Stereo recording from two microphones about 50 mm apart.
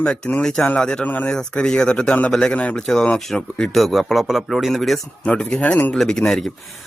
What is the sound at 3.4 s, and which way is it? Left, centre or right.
Speech, left.